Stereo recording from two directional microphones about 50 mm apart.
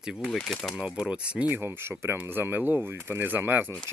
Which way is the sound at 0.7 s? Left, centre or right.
Centre.